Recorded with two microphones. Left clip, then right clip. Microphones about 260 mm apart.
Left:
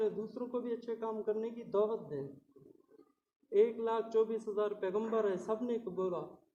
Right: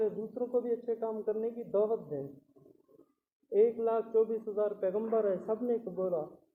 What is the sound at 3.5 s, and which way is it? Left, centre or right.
Speech, left.